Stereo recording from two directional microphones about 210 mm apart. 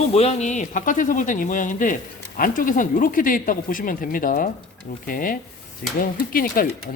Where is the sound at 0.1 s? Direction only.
30° left (ahead or behind).